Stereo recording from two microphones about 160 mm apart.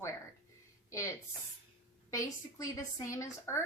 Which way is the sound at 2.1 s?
20° left (ahead or behind).